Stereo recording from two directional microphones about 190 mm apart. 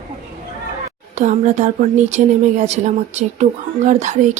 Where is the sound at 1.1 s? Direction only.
40° right (ahead or behind).